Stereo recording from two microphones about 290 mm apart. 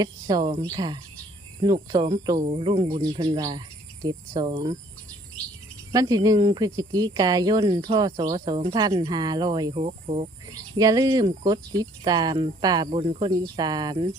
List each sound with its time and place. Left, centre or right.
0.0 s speech: centre
5.9 s speech: centre